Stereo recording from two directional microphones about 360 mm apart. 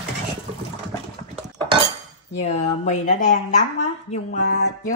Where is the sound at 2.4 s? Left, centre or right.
Centre.